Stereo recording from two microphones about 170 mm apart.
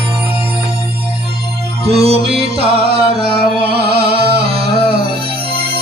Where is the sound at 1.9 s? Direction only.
35° right (ahead or behind).